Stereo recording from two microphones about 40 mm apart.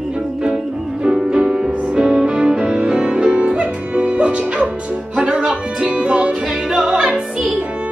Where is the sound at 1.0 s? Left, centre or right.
Centre.